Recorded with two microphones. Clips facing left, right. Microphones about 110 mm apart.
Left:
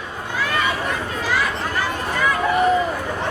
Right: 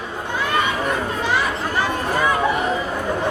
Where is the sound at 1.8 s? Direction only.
25° right (ahead or behind).